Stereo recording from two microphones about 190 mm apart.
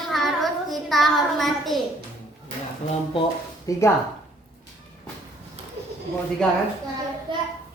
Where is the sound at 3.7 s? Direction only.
20° left (ahead or behind).